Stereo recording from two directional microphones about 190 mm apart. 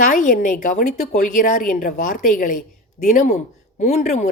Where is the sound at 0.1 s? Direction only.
40° left (ahead or behind).